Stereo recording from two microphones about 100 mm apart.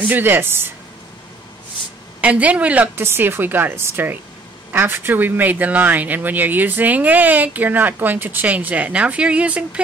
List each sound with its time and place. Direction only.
0.1 s speech: 20° right (ahead or behind)
2.2 s speech: 15° right (ahead or behind)